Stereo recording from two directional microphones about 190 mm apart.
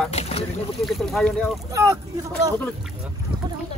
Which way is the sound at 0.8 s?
Centre (ahead or behind).